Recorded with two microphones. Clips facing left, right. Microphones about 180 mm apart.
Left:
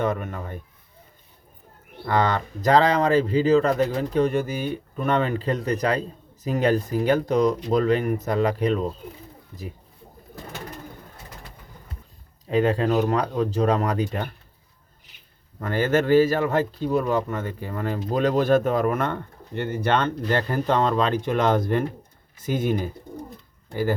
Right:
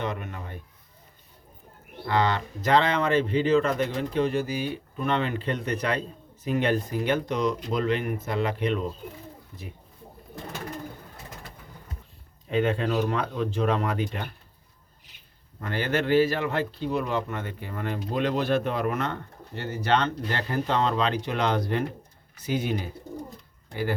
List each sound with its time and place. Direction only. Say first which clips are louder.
0.0 s speech: left 6 dB; 45° left (ahead or behind)
2.0 s speech: left 2 dB; 45° left (ahead or behind)
9.5 s speech: left 8 dB; 20° left (ahead or behind)
12.5 s speech: left 4 dB; 35° left (ahead or behind)
15.6 s speech: left 5 dB; 45° left (ahead or behind)